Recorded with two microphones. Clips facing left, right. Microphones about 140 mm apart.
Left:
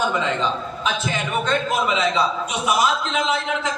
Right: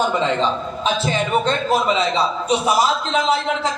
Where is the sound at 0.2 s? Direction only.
30° right (ahead or behind).